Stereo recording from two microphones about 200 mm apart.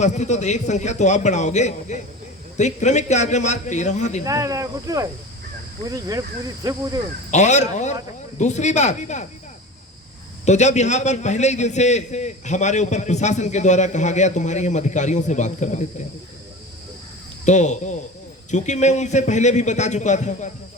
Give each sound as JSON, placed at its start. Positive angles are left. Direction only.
{"t": 0.0, "sound": "a man's voice", "side_deg": 35}
{"t": 4.2, "sound": "speech", "side_deg": -15}
{"t": 7.3, "sound": "a man's voice", "side_deg": 35}
{"t": 10.4, "sound": "a man's voice", "side_deg": 35}
{"t": 17.4, "sound": "a man's voice", "side_deg": 35}